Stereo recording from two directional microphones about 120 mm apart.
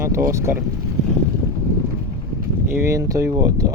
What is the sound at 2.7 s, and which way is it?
Speech, 25° right (ahead or behind).